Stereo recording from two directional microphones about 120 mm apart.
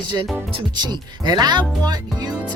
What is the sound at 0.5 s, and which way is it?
Speech, 35° right (ahead or behind).